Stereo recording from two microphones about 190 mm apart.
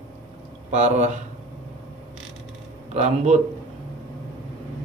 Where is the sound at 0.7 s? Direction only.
35° right (ahead or behind).